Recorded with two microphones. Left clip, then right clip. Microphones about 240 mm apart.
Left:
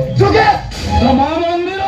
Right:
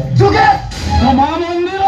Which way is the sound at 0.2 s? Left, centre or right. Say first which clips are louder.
Right 1 dB; right.